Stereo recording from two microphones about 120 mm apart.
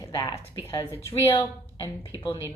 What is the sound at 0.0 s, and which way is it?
Speech, 30° left (ahead or behind).